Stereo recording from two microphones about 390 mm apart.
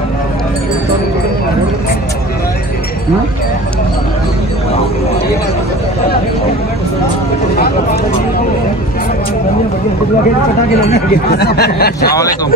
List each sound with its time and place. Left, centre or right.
7.5 s vehicle: left
10.9 s speech: left